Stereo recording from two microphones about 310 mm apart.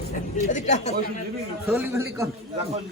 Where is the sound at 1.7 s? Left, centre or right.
Centre.